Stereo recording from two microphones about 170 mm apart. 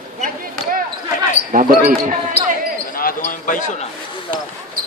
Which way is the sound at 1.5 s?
50° right (ahead or behind).